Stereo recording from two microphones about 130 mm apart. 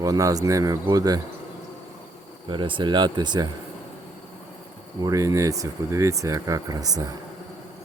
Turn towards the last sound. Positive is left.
turn(degrees=-30)  # may be behind; listen again after turning